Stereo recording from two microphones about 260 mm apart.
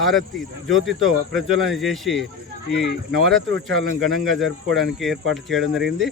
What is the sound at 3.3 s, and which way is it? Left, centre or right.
Speech, centre.